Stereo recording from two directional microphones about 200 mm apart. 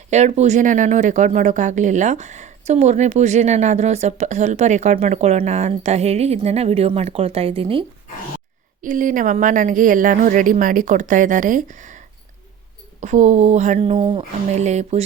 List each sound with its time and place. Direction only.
0.1 s speech: 35° right (ahead or behind)
8.8 s speech: 40° right (ahead or behind)